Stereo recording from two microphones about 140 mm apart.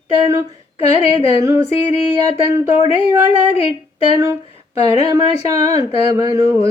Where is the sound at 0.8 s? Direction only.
45° left (ahead or behind).